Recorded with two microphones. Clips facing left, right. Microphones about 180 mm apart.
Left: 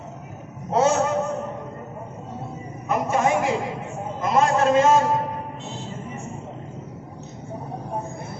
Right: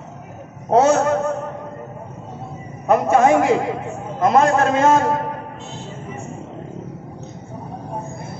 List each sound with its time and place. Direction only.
0.7 s a man's voice: 60° right (ahead or behind)
2.9 s a sound: 60° right (ahead or behind)
4.3 s a man's voice: 60° right (ahead or behind)